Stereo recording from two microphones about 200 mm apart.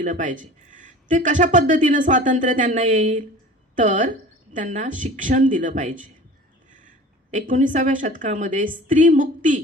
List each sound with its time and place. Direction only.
0.0 s speech: 40° right (ahead or behind)